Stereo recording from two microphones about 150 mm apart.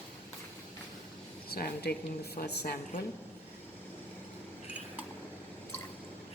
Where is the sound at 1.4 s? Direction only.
90° left.